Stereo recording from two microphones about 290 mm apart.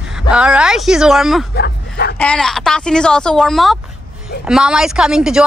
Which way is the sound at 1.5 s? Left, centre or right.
Left.